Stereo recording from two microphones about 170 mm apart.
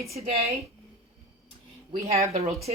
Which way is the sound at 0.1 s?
40° right (ahead or behind).